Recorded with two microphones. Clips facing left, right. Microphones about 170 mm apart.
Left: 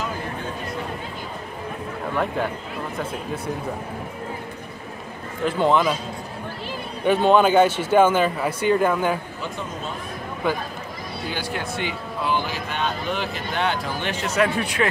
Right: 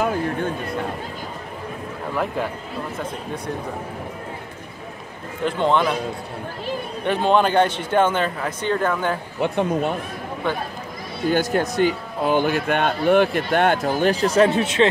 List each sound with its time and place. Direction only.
0.0 s a sound: 55° right (ahead or behind)
2.1 s a man's voice: centre (ahead or behind)
5.4 s a man's voice: 5° left (ahead or behind)
7.1 s speech: centre (ahead or behind)
9.4 s speech: 65° right (ahead or behind)
11.2 s speech: 45° right (ahead or behind); by 14.9 s 20° right (ahead or behind)